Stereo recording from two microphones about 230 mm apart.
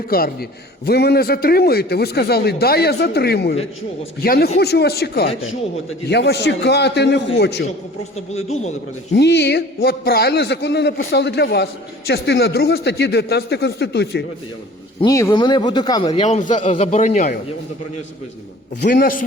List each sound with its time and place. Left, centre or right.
0.1 s a man's voice: left
9.1 s a man's voice: left
15.0 s speech: centre
16.2 s a man's voice: left
18.8 s a man's voice: left